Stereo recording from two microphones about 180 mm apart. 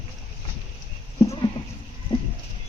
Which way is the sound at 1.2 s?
30° left (ahead or behind).